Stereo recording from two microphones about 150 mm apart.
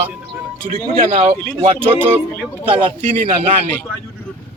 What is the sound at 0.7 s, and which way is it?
Speech, 65° right (ahead or behind).